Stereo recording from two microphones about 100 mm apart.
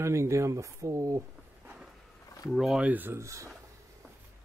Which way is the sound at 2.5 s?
5° right (ahead or behind).